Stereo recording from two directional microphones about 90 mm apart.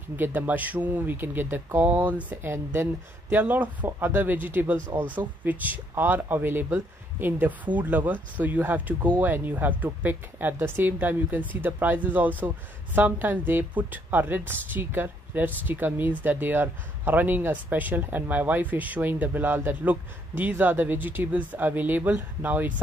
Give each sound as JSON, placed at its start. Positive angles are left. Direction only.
{"t": 0.1, "sound": "speech", "side_deg": -20}